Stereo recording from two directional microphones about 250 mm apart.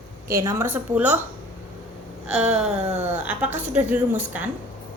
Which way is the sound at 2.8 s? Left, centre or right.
Right.